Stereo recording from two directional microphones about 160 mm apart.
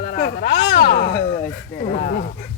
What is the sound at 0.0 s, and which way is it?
Speech, 65° left (ahead or behind).